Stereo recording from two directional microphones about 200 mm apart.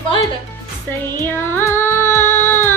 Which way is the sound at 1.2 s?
10° left (ahead or behind).